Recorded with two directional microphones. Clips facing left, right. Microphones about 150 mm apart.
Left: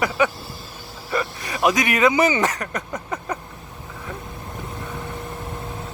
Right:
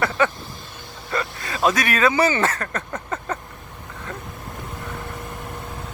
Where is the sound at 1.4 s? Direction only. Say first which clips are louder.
Even; 20° left (ahead or behind).